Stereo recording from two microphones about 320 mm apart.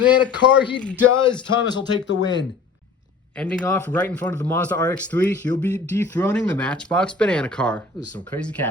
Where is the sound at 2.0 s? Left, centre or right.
Left.